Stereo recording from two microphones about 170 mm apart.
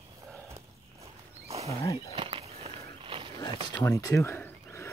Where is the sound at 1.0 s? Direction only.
40° right (ahead or behind).